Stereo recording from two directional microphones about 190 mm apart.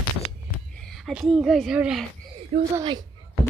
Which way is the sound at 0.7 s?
5° left (ahead or behind).